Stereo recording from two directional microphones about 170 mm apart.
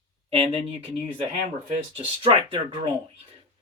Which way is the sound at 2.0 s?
30° right (ahead or behind).